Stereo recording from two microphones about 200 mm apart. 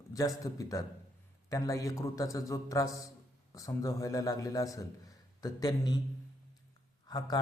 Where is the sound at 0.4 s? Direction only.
15° left (ahead or behind).